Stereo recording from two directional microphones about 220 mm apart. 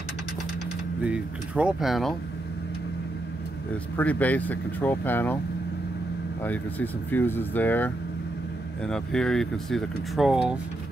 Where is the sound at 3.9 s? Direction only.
5° left (ahead or behind).